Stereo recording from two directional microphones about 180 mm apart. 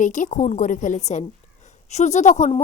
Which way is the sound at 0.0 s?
45° left (ahead or behind).